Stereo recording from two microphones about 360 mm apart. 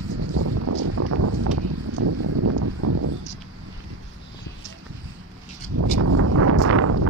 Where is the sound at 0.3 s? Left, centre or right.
Right.